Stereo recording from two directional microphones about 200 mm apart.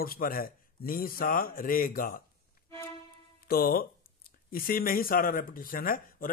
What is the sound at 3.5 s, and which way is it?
Speech, 50° left (ahead or behind).